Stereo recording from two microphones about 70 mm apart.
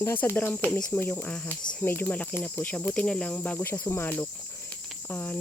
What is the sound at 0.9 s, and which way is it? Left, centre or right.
Speech, left.